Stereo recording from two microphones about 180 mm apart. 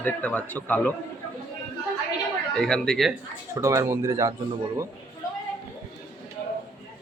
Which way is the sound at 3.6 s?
15° right (ahead or behind).